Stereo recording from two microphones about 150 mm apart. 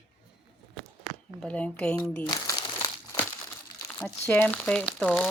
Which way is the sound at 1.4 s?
10° left (ahead or behind).